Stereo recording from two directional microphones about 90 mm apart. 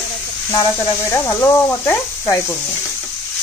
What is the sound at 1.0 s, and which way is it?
Speech, 30° left (ahead or behind).